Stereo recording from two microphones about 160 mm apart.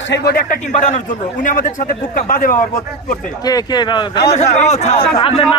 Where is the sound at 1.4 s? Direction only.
55° left (ahead or behind).